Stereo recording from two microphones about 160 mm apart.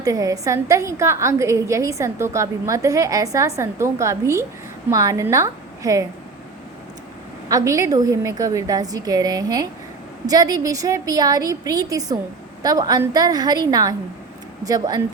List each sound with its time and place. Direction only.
0.0 s a woman's voice: 20° right (ahead or behind)
7.4 s a woman's voice: 20° right (ahead or behind)